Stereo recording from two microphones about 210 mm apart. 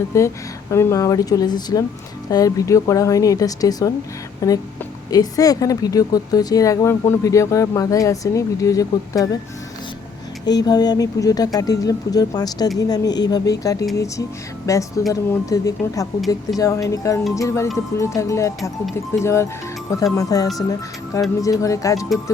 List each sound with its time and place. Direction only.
0.1 s speech: 15° left (ahead or behind)
10.4 s speech: 20° left (ahead or behind)